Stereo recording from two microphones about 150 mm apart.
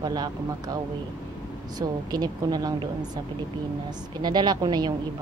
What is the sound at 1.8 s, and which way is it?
A woman's voice, 25° right (ahead or behind).